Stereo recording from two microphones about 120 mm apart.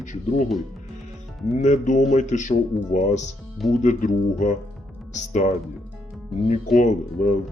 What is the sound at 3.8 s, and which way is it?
Speech, 90° left.